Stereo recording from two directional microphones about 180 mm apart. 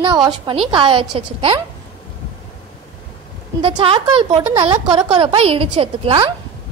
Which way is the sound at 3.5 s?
30° right (ahead or behind).